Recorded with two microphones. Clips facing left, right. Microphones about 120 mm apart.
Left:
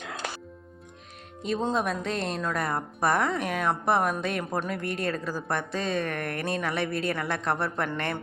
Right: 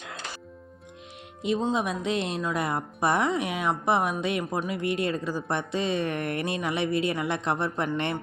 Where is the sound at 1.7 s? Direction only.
10° right (ahead or behind).